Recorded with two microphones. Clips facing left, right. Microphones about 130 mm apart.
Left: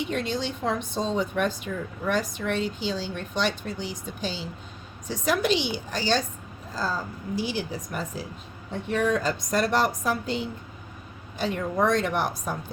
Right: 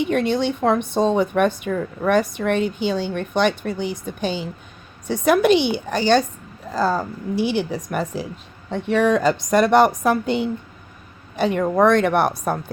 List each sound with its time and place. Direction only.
0.1 s a woman's voice: 60° right (ahead or behind)